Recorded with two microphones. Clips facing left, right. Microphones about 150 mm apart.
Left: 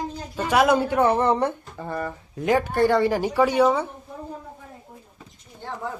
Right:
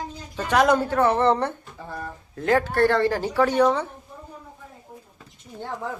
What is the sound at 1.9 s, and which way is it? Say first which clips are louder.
Speech: left 6 dB; 80° left.